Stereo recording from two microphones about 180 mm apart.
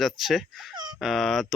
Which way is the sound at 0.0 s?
Centre (ahead or behind).